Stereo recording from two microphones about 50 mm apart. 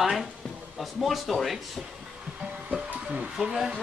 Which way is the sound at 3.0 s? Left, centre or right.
Right.